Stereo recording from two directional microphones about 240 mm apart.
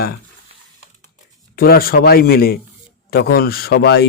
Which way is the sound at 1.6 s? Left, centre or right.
Left.